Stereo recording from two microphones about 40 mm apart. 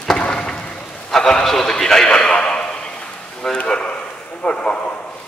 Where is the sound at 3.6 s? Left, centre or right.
Left.